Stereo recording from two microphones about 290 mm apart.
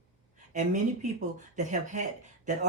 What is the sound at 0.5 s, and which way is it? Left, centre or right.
Speech, right.